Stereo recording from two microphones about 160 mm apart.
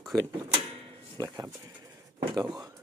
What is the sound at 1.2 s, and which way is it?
Speech, 20° right (ahead or behind).